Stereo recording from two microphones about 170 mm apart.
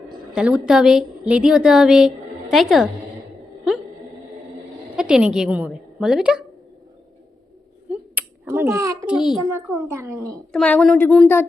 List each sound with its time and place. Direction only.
0.3 s a woman's voice: 5° right (ahead or behind)
4.9 s a woman's voice: 5° right (ahead or behind)
7.9 s finger snapping: 15° right (ahead or behind)
9.0 s a woman's voice: 5° right (ahead or behind)
9.5 s a woman's voice: 15° right (ahead or behind)
10.5 s a woman's voice: 5° left (ahead or behind)